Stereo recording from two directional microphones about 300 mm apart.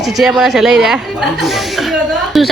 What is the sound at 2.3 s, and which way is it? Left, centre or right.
Chuckle, centre.